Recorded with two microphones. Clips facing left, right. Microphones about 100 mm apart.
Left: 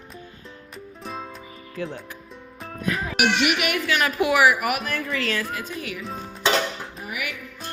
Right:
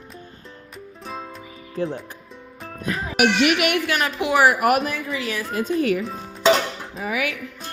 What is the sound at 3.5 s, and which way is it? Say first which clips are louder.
Speech: right 4 dB; 80° right.